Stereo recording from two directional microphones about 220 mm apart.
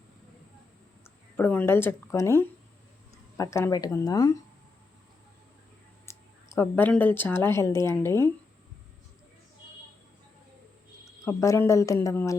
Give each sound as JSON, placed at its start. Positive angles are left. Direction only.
{"t": 1.4, "sound": "speech", "side_deg": 10}
{"t": 6.1, "sound": "speech", "side_deg": 10}
{"t": 11.3, "sound": "speech", "side_deg": 15}